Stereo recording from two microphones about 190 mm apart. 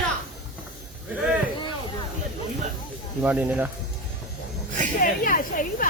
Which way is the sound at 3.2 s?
5° right (ahead or behind).